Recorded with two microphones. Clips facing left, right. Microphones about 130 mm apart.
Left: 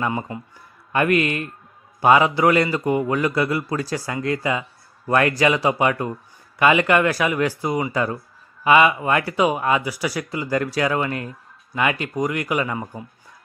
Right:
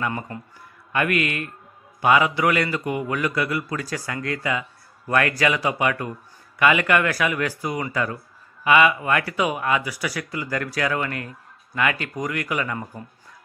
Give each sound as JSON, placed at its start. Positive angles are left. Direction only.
{"t": 0.9, "sound": "speech", "side_deg": 30}